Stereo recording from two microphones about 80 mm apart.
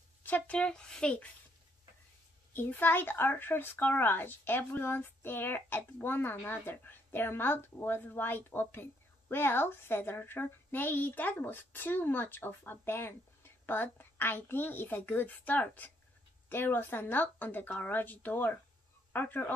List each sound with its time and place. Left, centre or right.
0.2 s speech: centre
2.5 s a woman's voice: left